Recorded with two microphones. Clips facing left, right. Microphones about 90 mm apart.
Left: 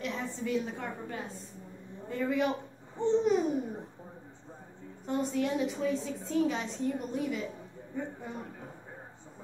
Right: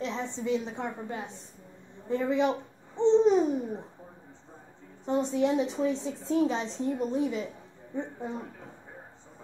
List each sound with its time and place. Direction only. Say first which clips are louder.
0.0 s a sound: right 3 dB; 25° right (ahead or behind)
0.4 s a woman's voice: right 3 dB; 20° right (ahead or behind)
5.0 s a woman's voice: right 4 dB; 25° right (ahead or behind)